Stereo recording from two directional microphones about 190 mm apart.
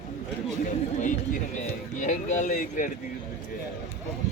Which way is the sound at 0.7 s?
40° left (ahead or behind).